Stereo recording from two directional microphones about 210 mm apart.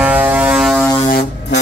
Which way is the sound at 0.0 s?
5° right (ahead or behind).